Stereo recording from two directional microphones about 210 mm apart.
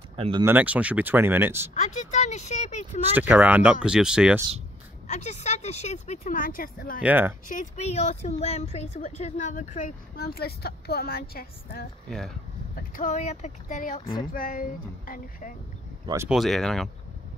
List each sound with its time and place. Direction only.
0.1 s speech: 25° right (ahead or behind)
0.5 s speech: 5° right (ahead or behind)
1.7 s a woman's voice: 35° left (ahead or behind)
3.2 s speech: 5° right (ahead or behind)
5.0 s a woman's voice: 35° left (ahead or behind)
7.0 s speech: 10° right (ahead or behind)
7.4 s a woman's voice: 35° left (ahead or behind)
16.3 s speech: centre (ahead or behind)